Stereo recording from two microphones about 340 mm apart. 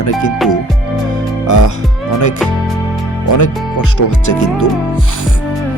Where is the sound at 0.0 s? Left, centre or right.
Left.